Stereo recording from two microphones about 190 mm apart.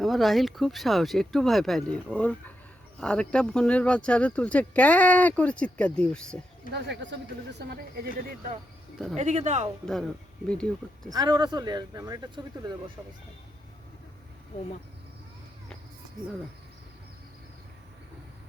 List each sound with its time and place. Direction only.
0.0 s speech: centre (ahead or behind)
6.7 s speech: 70° right (ahead or behind)
7.7 s speech: 55° right (ahead or behind)
9.1 s speech: 35° right (ahead or behind)
10.5 s speech: 5° left (ahead or behind)
11.1 s speech: 20° right (ahead or behind)